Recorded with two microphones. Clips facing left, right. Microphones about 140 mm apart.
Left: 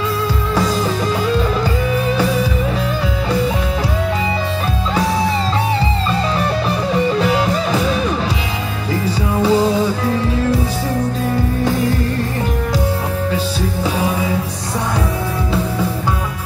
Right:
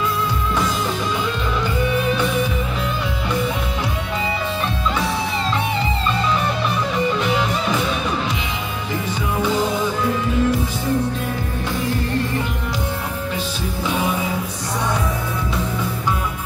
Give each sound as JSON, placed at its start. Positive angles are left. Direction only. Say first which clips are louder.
{"t": 7.2, "sound": "music", "louder": "left 4 dB", "side_deg": 35}
{"t": 9.4, "sound": "music", "louder": "left 6 dB", "side_deg": 35}